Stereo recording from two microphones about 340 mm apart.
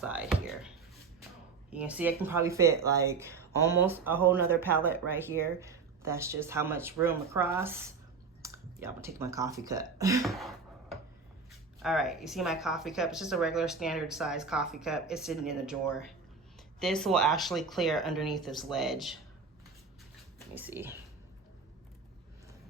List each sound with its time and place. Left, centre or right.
0.0 s a sound: centre
1.7 s speech: centre
16.8 s speech: centre
20.6 s speech: centre